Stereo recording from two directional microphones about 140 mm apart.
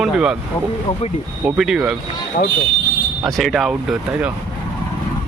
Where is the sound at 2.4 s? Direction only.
80° left.